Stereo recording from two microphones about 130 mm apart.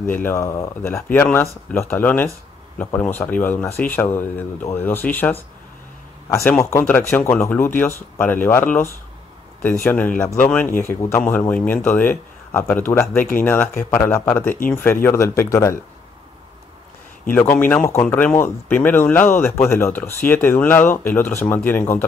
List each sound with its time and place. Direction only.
0.0 s speech: 15° left (ahead or behind)
6.6 s speech: 20° left (ahead or behind)
17.3 s speech: 15° left (ahead or behind)